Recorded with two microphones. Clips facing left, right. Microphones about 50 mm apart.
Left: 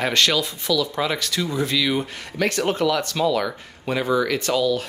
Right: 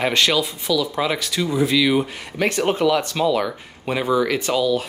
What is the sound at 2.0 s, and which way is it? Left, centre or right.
Speech, centre.